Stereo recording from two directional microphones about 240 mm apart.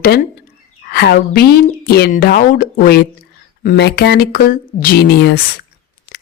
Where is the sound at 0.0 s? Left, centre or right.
Left.